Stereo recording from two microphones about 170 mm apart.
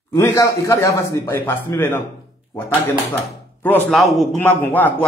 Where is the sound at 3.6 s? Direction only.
10° left (ahead or behind).